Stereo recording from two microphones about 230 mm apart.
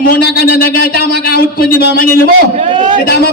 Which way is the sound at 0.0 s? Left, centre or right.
Left.